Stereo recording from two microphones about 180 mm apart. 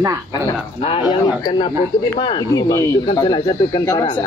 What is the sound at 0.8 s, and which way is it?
Speech, 30° left (ahead or behind).